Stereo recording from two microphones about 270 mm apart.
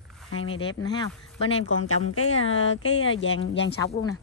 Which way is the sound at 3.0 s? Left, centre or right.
Left.